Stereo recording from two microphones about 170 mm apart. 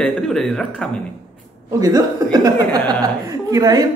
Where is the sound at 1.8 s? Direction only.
20° right (ahead or behind).